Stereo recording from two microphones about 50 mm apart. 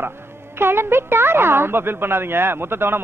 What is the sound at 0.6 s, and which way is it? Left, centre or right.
Speech, right.